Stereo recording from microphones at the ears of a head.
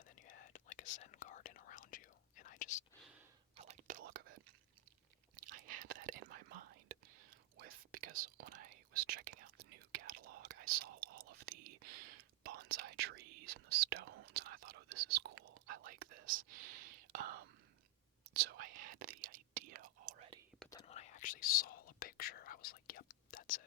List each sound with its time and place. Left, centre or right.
0.2 s whispering: left
3.5 s whispering: right
20.8 s whispering: left